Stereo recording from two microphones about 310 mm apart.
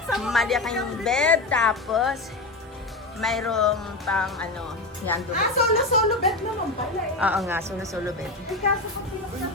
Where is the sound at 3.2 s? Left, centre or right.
Centre.